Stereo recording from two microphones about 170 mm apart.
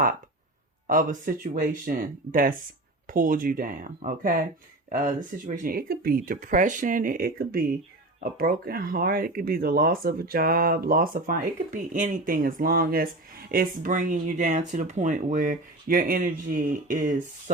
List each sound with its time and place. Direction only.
0.9 s speech: 55° right (ahead or behind)